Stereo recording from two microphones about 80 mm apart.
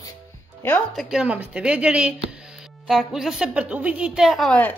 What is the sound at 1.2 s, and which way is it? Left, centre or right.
Speech, centre.